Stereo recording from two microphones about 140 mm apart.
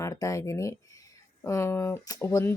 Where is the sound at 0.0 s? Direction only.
25° left (ahead or behind).